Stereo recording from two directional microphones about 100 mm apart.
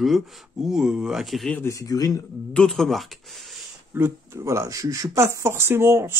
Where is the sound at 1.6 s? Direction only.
35° left (ahead or behind).